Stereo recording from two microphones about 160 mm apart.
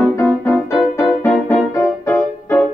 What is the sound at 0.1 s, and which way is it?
Music, 15° left (ahead or behind).